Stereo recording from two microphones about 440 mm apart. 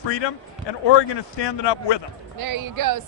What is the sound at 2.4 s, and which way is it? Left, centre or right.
Speech, right.